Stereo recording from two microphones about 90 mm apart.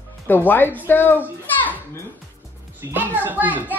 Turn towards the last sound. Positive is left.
turn(degrees=-20)  # may be behind; listen again after turning